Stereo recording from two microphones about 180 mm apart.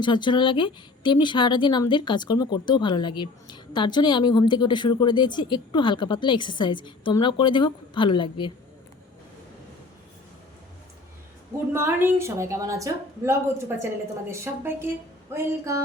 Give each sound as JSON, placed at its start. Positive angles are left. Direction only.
{"t": 0.0, "sound": "speech", "side_deg": 25}
{"t": 11.7, "sound": "a woman's voice", "side_deg": -10}